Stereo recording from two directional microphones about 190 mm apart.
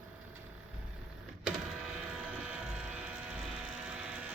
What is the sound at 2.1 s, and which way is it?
Vehicle, 5° right (ahead or behind).